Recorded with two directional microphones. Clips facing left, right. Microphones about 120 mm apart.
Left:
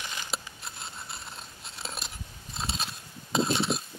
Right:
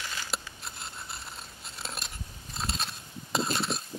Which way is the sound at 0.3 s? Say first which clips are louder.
Even; centre (ahead or behind).